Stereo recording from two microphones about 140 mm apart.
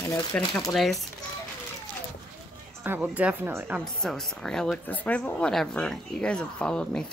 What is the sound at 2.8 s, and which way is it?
Speech, 15° right (ahead or behind).